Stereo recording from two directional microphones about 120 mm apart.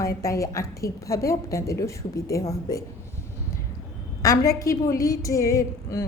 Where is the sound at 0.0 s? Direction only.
25° left (ahead or behind).